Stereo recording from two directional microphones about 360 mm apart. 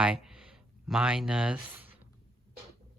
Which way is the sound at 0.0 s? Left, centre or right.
Centre.